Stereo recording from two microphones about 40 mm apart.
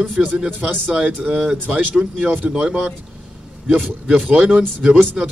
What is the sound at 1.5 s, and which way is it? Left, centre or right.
Speech, right.